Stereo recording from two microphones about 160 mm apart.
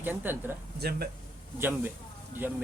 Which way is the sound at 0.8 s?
75° right (ahead or behind).